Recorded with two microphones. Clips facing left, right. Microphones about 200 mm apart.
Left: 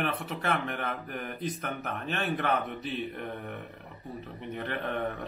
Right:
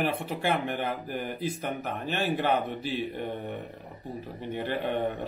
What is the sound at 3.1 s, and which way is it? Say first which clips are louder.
A man's voice: right 4 dB; 30° right (ahead or behind).